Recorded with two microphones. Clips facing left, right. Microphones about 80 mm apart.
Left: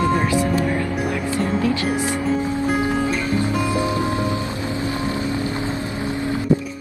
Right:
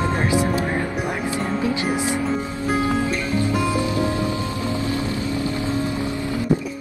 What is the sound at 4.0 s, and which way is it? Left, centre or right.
Music, left.